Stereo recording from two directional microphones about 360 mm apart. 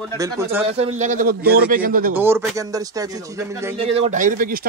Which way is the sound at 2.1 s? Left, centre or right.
Centre.